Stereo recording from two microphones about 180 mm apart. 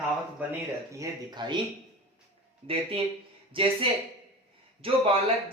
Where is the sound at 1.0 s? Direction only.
25° right (ahead or behind).